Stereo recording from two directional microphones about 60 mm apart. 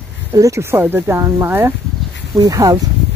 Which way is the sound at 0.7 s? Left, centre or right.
Right.